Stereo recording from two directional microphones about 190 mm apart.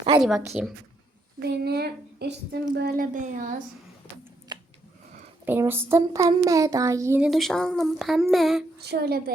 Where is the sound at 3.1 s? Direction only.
40° right (ahead or behind).